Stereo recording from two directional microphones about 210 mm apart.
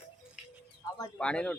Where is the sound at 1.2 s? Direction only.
5° left (ahead or behind).